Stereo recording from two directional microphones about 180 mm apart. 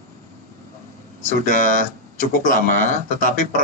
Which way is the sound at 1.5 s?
45° left (ahead or behind).